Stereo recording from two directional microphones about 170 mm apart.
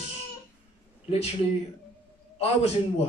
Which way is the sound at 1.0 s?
35° left (ahead or behind).